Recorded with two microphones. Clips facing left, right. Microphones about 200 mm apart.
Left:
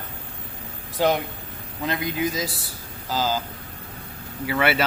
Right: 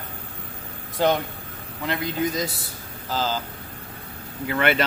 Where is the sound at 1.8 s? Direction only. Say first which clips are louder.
Left 1 dB; 15° left (ahead or behind).